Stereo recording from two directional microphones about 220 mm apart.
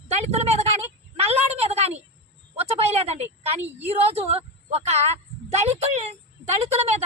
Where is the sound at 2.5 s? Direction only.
30° right (ahead or behind).